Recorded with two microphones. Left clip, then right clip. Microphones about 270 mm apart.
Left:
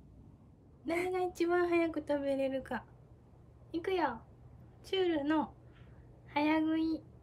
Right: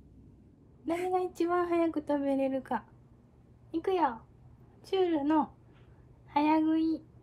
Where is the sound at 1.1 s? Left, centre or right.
Centre.